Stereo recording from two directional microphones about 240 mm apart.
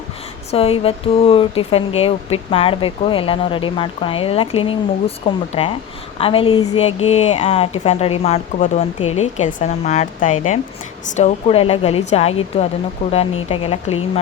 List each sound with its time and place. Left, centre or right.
0.5 s speech: left